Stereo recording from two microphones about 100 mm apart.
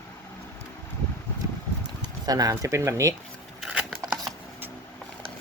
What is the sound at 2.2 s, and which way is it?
Speech, 40° right (ahead or behind).